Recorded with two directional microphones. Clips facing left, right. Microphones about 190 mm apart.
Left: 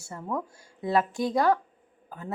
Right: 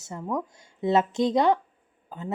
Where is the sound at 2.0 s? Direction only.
25° right (ahead or behind).